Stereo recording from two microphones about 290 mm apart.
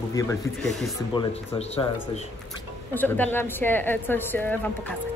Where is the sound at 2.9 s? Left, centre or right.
Centre.